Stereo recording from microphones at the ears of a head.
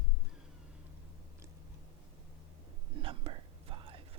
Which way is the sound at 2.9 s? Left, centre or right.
Right.